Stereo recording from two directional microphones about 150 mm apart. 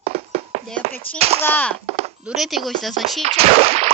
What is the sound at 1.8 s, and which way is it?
Chop, 45° right (ahead or behind).